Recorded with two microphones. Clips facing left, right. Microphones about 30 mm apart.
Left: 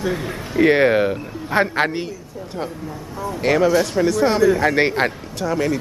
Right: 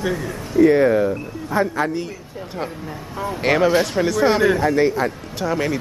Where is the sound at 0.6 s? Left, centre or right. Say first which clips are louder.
Even; left.